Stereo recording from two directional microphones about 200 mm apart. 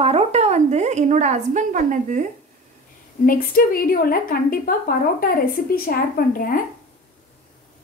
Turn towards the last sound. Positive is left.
turn(degrees=45)  # may be behind; listen again after turning